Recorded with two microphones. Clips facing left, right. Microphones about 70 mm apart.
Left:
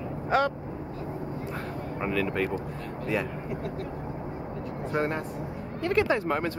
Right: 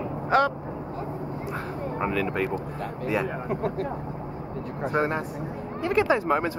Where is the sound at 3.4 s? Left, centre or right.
Right.